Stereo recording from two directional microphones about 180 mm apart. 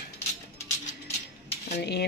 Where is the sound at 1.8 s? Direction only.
65° left (ahead or behind).